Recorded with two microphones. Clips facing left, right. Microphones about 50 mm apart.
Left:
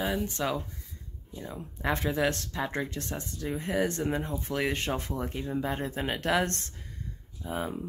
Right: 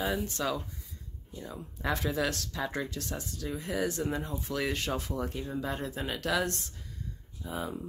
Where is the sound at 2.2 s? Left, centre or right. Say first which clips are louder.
Left 3 dB; left.